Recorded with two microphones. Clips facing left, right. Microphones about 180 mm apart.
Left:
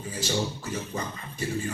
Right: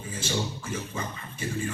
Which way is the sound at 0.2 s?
40° left (ahead or behind).